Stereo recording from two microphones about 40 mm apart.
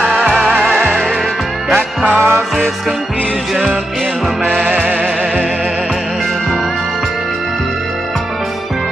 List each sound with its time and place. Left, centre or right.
0.4 s music: centre
2.1 s music: right
4.6 s music: right